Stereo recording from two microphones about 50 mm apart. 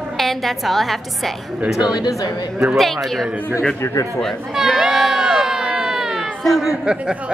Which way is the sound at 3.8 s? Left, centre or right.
Left.